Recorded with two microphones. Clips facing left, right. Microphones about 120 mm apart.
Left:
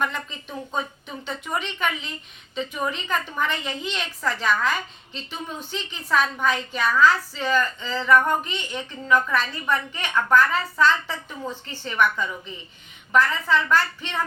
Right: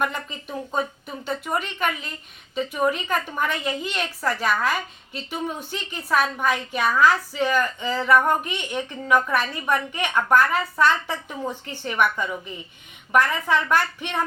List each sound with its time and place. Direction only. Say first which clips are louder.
0.0 s a woman's voice: right 1 dB; 10° right (ahead or behind)